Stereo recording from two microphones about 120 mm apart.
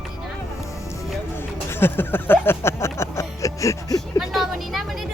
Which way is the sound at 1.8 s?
15° left (ahead or behind).